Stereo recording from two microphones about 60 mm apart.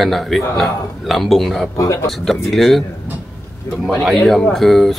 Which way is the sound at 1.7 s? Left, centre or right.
Left.